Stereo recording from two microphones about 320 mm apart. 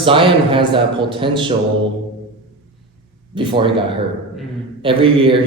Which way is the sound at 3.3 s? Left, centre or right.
Centre.